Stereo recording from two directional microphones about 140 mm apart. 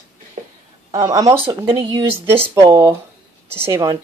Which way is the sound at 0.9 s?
25° right (ahead or behind).